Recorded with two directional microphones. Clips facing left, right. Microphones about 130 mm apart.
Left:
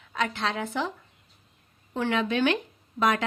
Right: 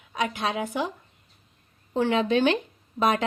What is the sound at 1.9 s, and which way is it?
A woman's voice, 20° right (ahead or behind).